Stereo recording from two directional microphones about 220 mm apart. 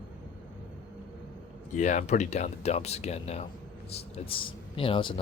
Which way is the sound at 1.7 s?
35° left (ahead or behind).